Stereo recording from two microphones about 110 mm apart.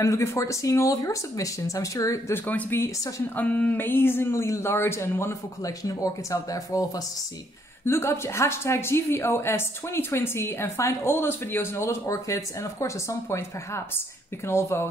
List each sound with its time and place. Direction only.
0.0 s speech: 25° left (ahead or behind)
2.4 s speech: 15° left (ahead or behind)